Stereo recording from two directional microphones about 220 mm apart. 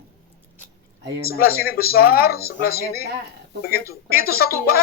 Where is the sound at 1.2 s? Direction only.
45° left (ahead or behind).